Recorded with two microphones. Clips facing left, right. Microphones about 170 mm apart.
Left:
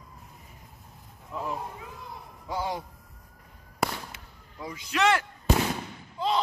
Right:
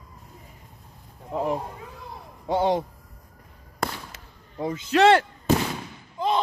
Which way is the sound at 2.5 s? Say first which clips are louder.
Right 9 dB; 25° right (ahead or behind).